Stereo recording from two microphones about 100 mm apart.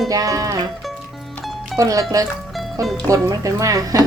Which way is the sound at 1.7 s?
35° right (ahead or behind).